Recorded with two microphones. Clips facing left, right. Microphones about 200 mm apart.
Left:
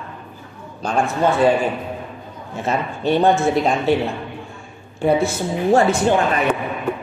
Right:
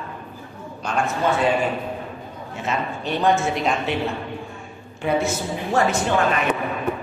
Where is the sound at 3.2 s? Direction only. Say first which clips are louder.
Left 3 dB; 35° left (ahead or behind).